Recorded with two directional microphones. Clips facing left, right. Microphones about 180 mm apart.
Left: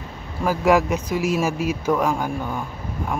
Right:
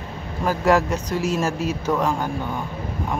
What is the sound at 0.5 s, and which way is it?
Speech, 10° left (ahead or behind).